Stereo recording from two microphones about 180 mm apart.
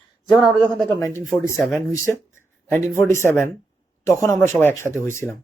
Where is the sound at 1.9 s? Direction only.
15° left (ahead or behind).